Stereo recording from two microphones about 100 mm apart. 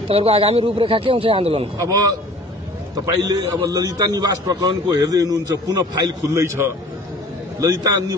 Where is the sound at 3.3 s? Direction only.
40° right (ahead or behind).